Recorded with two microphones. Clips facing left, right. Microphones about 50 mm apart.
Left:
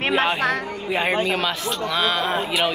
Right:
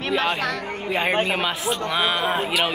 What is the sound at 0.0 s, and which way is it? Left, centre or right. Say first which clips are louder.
Speech: left 3 dB; left.